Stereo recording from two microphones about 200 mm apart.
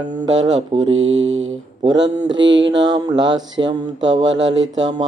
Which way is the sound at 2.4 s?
65° right (ahead or behind).